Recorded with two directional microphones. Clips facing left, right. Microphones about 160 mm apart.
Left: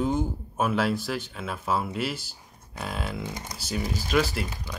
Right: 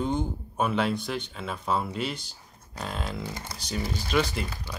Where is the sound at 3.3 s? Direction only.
15° left (ahead or behind).